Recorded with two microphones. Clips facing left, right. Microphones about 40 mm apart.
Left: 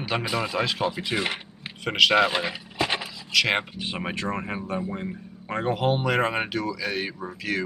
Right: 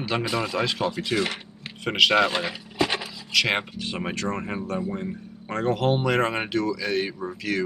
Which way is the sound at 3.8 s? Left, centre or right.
Centre.